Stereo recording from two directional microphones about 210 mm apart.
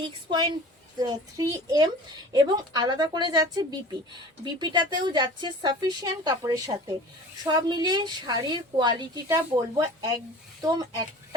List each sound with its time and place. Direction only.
0.3 s a woman's voice: 20° right (ahead or behind)